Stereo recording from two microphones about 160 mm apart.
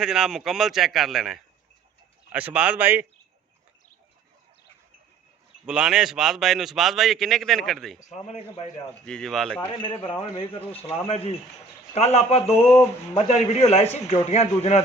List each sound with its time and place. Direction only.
0.0 s a man's voice: 5° right (ahead or behind)
5.6 s a man's voice: 5° right (ahead or behind)
9.0 s a man's voice: 5° left (ahead or behind)
9.6 s a man's voice: 30° left (ahead or behind)